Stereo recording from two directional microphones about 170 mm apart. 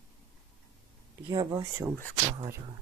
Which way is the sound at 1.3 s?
25° right (ahead or behind).